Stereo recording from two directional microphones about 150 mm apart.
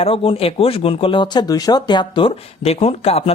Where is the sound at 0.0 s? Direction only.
40° left (ahead or behind).